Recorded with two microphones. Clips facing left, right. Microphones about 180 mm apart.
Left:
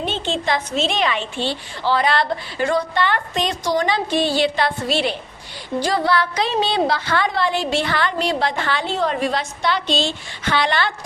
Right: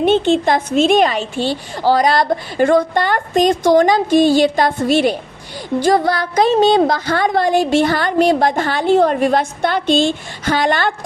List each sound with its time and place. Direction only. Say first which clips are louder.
0.0 s a woman's voice: right 10 dB; 55° right (ahead or behind)